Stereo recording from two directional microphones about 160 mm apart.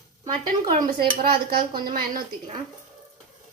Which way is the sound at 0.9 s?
65° right (ahead or behind).